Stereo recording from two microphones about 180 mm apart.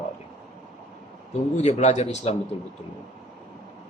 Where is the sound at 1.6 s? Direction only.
40° left (ahead or behind).